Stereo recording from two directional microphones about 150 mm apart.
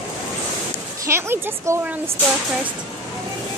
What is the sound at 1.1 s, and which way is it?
Speech, 15° right (ahead or behind).